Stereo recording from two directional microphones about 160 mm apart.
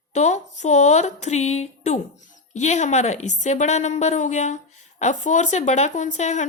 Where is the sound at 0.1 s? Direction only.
45° left (ahead or behind).